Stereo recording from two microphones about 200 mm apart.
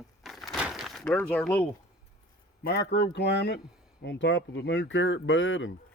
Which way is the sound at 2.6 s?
55° left (ahead or behind).